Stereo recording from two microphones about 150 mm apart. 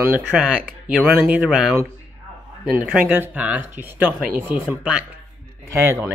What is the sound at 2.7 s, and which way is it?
Speech, 10° right (ahead or behind).